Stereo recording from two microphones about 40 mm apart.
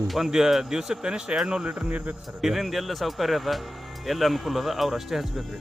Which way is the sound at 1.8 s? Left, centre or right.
Right.